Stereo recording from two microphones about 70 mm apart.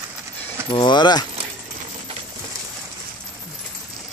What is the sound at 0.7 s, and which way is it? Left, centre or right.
Speech, left.